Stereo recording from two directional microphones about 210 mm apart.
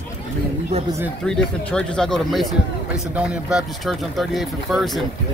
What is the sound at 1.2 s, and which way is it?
Speech, 5° left (ahead or behind).